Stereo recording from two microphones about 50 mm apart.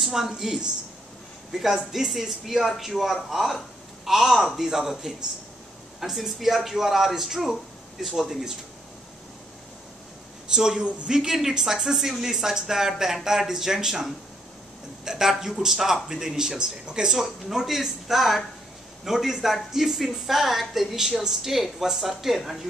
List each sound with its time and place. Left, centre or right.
0.0 s a woman's voice: centre
10.5 s a woman's voice: centre